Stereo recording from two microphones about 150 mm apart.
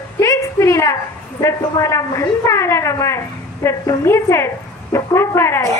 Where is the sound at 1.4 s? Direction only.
20° left (ahead or behind).